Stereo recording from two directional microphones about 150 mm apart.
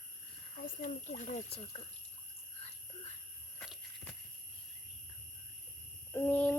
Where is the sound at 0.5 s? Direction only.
55° left (ahead or behind).